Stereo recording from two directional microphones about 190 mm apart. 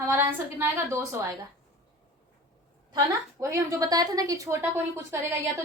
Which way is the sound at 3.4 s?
15° right (ahead or behind).